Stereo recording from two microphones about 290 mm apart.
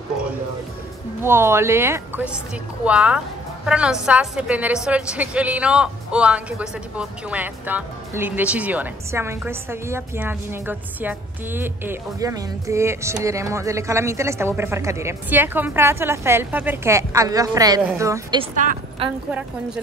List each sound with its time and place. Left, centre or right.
1.2 s a woman's voice: centre
18.6 s a woman's voice: right